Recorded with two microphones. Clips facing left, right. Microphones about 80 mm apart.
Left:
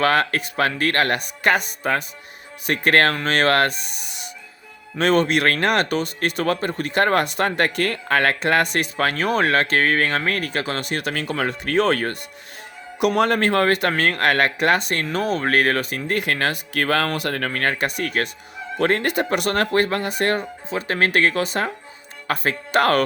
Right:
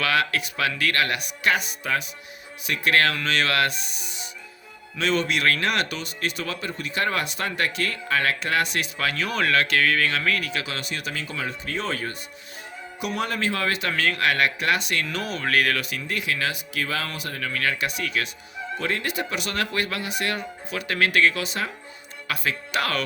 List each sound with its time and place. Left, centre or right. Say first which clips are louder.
0.0 s speech: left 5 dB; left
17.5 s speech: left 4 dB; left